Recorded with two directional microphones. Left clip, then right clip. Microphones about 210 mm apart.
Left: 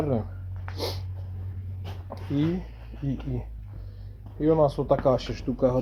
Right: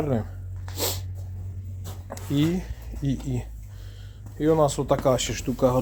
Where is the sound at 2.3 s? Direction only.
25° right (ahead or behind).